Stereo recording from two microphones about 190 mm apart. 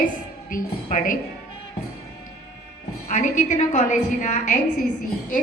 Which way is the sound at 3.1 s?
40° left (ahead or behind).